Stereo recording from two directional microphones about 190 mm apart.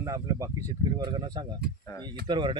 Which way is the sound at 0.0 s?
15° right (ahead or behind).